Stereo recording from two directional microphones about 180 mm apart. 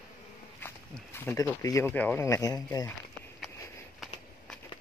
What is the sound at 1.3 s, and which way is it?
Speech, 20° left (ahead or behind).